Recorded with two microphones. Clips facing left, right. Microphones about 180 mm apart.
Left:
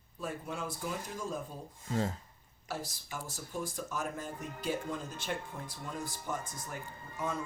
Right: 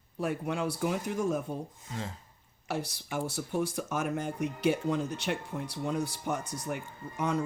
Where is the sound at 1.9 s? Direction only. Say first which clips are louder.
Left 7 dB; 40° left (ahead or behind).